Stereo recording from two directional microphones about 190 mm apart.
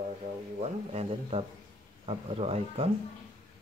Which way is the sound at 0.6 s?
35° right (ahead or behind).